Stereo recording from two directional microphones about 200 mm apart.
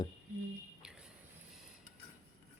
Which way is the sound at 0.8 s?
5° right (ahead or behind).